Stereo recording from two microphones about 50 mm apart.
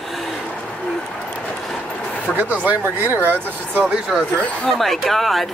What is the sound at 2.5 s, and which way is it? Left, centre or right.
Speech, right.